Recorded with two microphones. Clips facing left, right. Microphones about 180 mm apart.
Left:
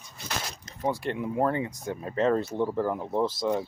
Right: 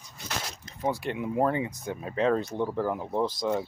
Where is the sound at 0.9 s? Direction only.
5° right (ahead or behind).